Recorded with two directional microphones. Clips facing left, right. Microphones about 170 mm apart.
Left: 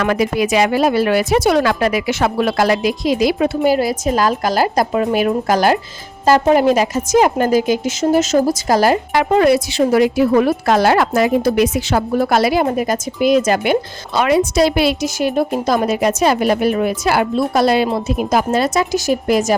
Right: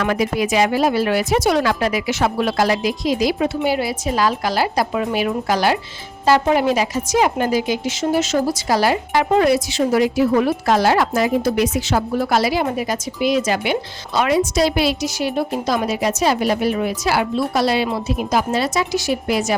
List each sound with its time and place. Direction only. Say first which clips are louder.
0.0 s speech: left 3 dB; 70° left (ahead or behind)
3.6 s a woman's voice: left 5 dB; 45° left (ahead or behind)
9.1 s a woman's voice: left 1 dB; 65° left (ahead or behind)
14.2 s a woman's voice: left 3 dB; 60° left (ahead or behind); by 19.5 s 45° left (ahead or behind)